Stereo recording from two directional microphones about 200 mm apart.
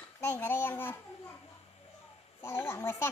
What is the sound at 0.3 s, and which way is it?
Speech, 10° left (ahead or behind).